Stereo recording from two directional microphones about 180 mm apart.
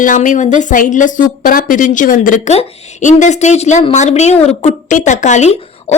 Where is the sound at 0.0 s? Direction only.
45° left (ahead or behind).